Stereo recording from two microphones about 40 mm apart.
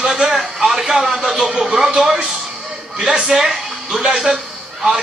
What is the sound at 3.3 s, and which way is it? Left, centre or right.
Speech, centre.